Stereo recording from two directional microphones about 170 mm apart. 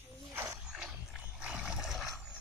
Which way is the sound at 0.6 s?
5° right (ahead or behind).